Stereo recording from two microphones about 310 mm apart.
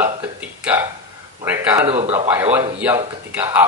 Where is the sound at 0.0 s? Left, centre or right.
Centre.